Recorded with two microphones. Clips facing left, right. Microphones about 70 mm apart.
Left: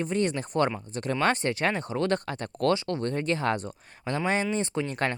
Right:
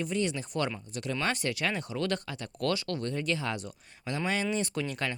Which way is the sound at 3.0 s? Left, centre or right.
Left.